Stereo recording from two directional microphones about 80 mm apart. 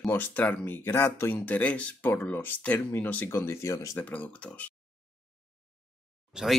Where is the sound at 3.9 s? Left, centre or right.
Centre.